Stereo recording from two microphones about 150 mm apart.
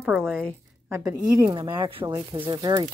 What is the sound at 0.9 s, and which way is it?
A woman's voice, 20° right (ahead or behind).